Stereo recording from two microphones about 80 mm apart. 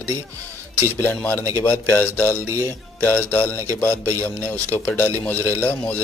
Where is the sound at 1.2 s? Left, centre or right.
Left.